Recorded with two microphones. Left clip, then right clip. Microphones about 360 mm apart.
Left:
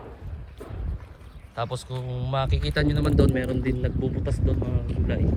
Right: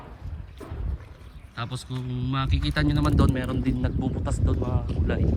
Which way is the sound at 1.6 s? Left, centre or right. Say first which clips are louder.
Left 4 dB; centre.